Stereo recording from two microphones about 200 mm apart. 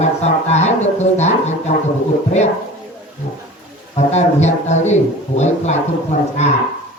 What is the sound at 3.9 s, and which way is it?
Speech, 35° left (ahead or behind).